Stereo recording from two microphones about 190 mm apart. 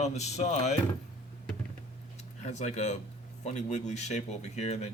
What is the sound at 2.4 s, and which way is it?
Speech, 35° left (ahead or behind).